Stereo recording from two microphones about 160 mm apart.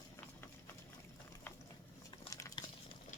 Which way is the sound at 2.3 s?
20° left (ahead or behind).